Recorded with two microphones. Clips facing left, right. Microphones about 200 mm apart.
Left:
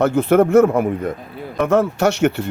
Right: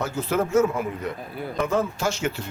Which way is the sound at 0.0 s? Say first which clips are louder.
Left 11 dB; 60° left (ahead or behind).